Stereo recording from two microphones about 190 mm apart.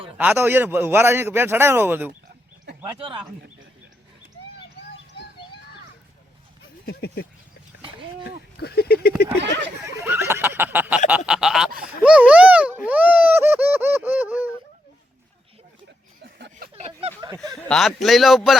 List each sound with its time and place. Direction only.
0.2 s a man's voice: 10° right (ahead or behind)
2.8 s speech: 25° right (ahead or behind)
6.8 s speech: 55° left (ahead or behind)
8.5 s speech: 55° left (ahead or behind)
10.1 s a sound: 10° right (ahead or behind)
11.3 s a man's voice: 5° right (ahead or behind)
16.2 s a sound: 55° right (ahead or behind)
16.7 s a sound: 35° right (ahead or behind)
17.6 s a man's voice: centre (ahead or behind)